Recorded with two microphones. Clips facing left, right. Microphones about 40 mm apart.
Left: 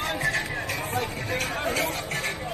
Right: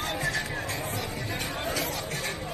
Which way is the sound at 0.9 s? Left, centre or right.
Left.